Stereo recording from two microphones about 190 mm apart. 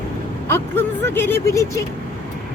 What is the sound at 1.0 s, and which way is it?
Speech, 10° left (ahead or behind).